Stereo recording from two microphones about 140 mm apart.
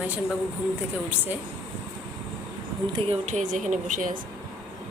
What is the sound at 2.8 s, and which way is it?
Speech, 35° right (ahead or behind).